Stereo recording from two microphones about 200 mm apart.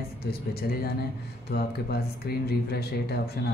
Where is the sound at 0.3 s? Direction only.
50° left (ahead or behind).